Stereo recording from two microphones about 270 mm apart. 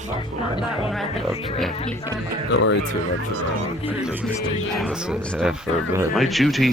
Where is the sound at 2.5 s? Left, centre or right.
Left.